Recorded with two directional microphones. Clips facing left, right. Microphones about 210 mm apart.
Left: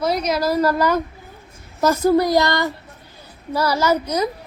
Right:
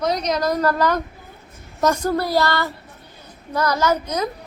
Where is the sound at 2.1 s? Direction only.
15° left (ahead or behind).